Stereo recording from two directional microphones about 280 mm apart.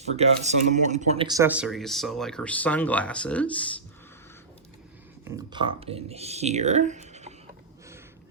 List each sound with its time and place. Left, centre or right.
0.2 s speech: right; by 3.6 s centre
5.2 s speech: centre